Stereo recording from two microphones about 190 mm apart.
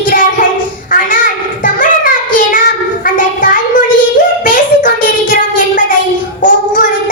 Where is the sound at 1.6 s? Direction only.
45° left (ahead or behind).